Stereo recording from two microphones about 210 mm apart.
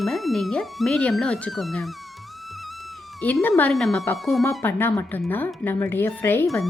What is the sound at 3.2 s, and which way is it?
Speech, 5° left (ahead or behind).